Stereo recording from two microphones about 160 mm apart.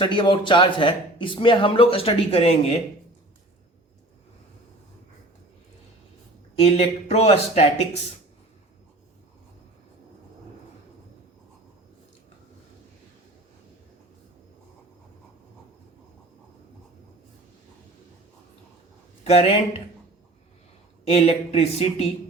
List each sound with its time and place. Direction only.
0.0 s speech: 30° left (ahead or behind)
6.6 s speech: 40° left (ahead or behind)
19.2 s speech: 40° left (ahead or behind)
21.1 s speech: 40° left (ahead or behind)